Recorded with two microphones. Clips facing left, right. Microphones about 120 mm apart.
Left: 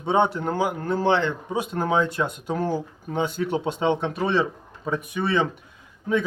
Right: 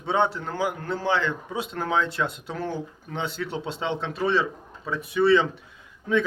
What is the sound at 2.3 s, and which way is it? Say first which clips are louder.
Speech: left 5 dB; 45° left (ahead or behind).